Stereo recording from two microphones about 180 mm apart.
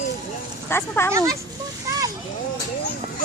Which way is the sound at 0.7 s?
15° left (ahead or behind).